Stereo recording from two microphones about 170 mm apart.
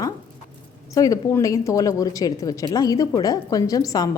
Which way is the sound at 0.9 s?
20° left (ahead or behind).